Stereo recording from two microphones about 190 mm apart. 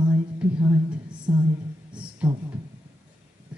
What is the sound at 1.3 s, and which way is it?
Speech, 15° right (ahead or behind).